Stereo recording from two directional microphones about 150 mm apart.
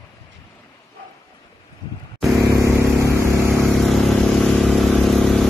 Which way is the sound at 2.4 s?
20° right (ahead or behind).